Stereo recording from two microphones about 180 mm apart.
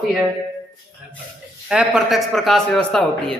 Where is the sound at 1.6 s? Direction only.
5° right (ahead or behind).